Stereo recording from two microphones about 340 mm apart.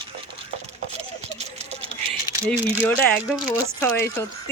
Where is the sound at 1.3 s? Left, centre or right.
Centre.